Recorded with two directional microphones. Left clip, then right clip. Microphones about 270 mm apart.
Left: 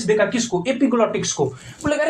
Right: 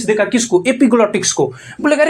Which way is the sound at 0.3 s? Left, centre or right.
Right.